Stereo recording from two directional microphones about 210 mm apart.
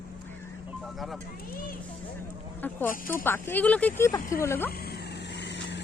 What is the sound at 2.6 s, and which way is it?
Speech, 10° left (ahead or behind).